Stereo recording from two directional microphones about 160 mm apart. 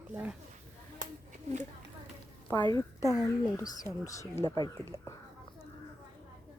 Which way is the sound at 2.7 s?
20° left (ahead or behind).